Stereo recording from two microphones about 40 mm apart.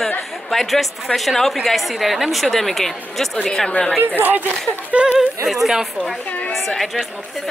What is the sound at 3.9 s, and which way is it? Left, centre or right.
Speech, right.